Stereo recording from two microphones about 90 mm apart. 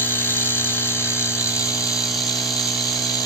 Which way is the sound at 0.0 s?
25° left (ahead or behind).